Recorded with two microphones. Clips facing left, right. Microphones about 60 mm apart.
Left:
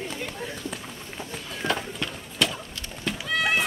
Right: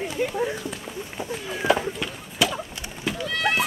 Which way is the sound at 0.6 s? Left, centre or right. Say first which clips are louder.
Right 3 dB; centre.